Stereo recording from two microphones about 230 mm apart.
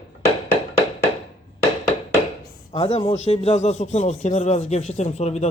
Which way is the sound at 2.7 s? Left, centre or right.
Left.